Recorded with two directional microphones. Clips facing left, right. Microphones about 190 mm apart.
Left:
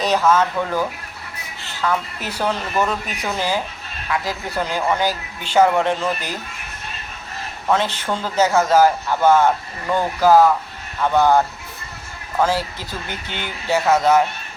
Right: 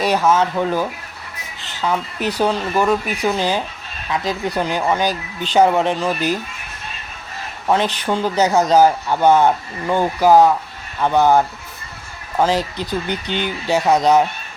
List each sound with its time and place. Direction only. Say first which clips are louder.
0.0 s speech: right 1 dB; 15° right (ahead or behind)
7.7 s speech: right 2 dB; 15° right (ahead or behind)